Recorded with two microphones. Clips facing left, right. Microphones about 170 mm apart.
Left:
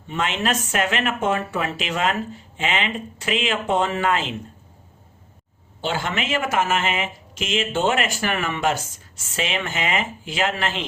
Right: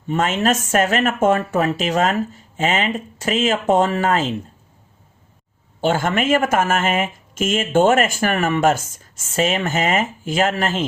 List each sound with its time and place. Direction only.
0.1 s speech: 45° right (ahead or behind)
5.8 s speech: 45° right (ahead or behind)